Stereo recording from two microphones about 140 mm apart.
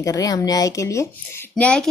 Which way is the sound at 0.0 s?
25° left (ahead or behind).